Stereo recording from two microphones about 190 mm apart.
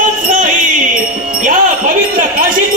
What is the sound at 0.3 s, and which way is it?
Music, 45° right (ahead or behind).